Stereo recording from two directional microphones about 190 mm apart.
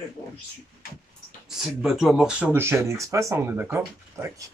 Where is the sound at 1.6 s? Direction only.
Centre (ahead or behind).